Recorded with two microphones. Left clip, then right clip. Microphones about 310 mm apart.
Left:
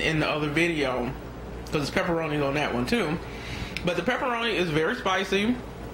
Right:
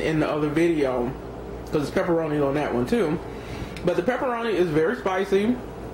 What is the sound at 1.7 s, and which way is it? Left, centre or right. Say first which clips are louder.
Speech: right 3 dB; centre.